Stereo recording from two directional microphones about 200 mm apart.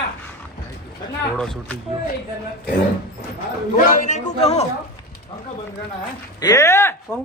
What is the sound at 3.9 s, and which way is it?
Speech, 40° left (ahead or behind).